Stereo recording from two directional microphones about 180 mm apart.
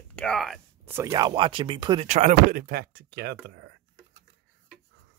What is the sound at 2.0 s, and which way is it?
Speech, 40° right (ahead or behind).